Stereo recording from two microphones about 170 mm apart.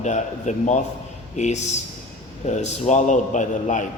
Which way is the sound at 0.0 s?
45° left (ahead or behind).